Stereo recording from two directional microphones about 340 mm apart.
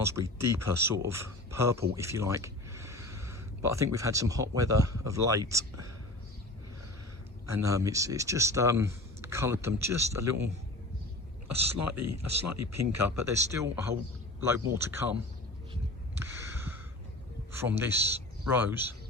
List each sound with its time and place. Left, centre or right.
0.0 s speech: centre
7.4 s speech: centre
11.4 s speech: right
12.9 s speech: centre
16.2 s gasp: centre
17.5 s a man's voice: centre